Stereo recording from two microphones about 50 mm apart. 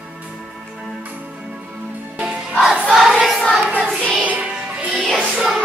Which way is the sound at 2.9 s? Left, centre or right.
Centre.